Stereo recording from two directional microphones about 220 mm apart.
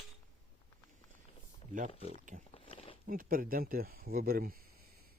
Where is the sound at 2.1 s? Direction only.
35° right (ahead or behind).